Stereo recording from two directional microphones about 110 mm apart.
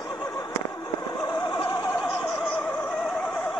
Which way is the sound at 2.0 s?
5° left (ahead or behind).